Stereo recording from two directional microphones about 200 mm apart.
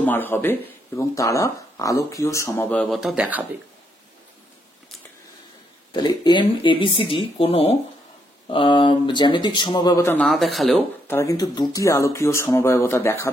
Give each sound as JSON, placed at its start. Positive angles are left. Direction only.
{"t": 0.0, "sound": "speech", "side_deg": 10}
{"t": 5.9, "sound": "speech", "side_deg": 20}
{"t": 10.2, "sound": "speech", "side_deg": 0}
{"t": 11.1, "sound": "speech", "side_deg": 15}